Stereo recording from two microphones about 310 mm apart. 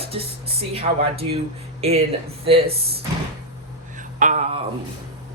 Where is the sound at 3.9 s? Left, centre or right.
Right.